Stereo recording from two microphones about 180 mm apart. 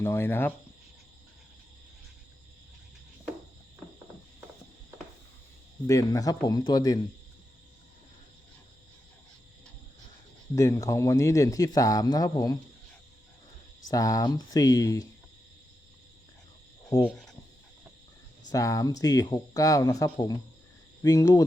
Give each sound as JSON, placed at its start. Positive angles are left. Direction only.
{"t": 0.0, "sound": "speech", "side_deg": 15}
{"t": 5.9, "sound": "speech", "side_deg": 20}
{"t": 10.5, "sound": "speech", "side_deg": 20}
{"t": 13.8, "sound": "speech", "side_deg": 20}
{"t": 17.0, "sound": "speech", "side_deg": 5}
{"t": 18.5, "sound": "speech", "side_deg": 20}